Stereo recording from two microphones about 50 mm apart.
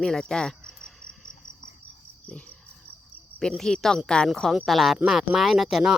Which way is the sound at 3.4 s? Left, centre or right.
Centre.